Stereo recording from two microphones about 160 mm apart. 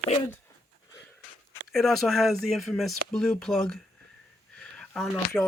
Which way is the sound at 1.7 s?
Centre (ahead or behind).